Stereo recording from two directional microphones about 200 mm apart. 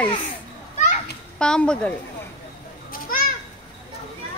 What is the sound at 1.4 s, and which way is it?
Speech, 5° left (ahead or behind).